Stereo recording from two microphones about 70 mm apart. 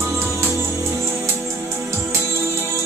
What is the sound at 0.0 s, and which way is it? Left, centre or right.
Music, right.